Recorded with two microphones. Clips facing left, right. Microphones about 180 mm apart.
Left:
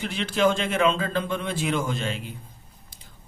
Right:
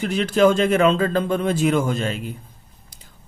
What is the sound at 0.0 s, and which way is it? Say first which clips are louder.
Speech: right 6 dB; 40° right (ahead or behind).